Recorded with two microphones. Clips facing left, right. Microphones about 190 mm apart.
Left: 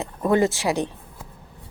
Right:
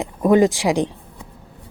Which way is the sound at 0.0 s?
15° right (ahead or behind).